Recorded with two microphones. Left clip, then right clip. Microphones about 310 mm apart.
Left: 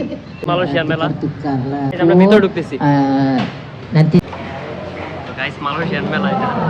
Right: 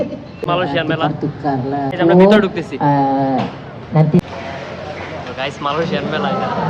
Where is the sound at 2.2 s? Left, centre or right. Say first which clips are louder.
Even; centre.